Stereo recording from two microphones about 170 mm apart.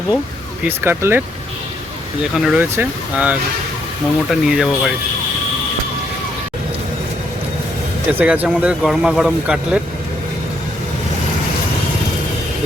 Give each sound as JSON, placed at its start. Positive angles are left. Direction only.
{"t": 0.6, "sound": "speech", "side_deg": -15}
{"t": 2.3, "sound": "speech", "side_deg": -5}
{"t": 8.1, "sound": "speech", "side_deg": -10}